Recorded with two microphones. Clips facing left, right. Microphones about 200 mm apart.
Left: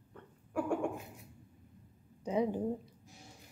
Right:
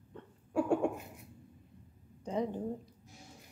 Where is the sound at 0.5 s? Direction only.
25° right (ahead or behind).